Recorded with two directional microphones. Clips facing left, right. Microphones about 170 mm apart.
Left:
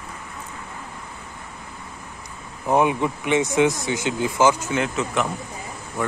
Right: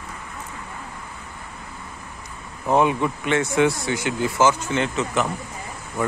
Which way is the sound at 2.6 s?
15° left (ahead or behind).